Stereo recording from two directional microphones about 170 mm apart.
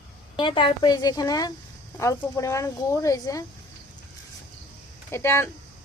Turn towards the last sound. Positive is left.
turn(degrees=15)  # may be behind; listen again after turning